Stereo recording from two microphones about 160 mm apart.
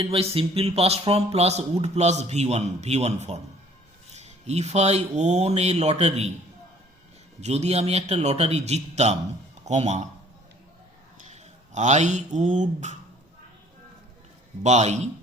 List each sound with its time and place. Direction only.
0.0 s speech: 40° right (ahead or behind)
7.4 s speech: 45° right (ahead or behind)
11.3 s speech: 45° right (ahead or behind)
14.6 s speech: 45° right (ahead or behind)